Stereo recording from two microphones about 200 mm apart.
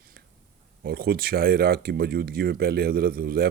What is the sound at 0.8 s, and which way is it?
Speech, 50° right (ahead or behind).